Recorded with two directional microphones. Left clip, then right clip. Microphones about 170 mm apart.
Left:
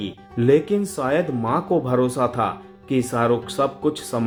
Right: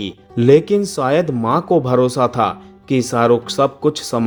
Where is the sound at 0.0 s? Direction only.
40° right (ahead or behind).